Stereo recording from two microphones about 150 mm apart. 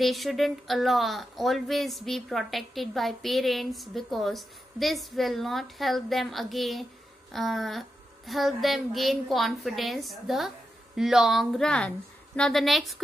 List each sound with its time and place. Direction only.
0.0 s speech: centre (ahead or behind)